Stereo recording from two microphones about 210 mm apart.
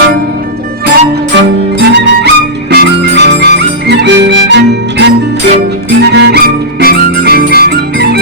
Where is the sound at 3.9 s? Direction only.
55° right (ahead or behind).